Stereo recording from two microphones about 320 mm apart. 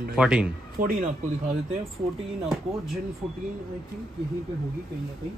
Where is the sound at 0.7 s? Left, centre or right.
Right.